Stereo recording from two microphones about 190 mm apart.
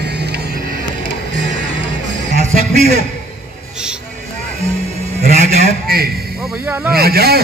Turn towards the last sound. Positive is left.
turn(degrees=-55)  # may be behind; listen again after turning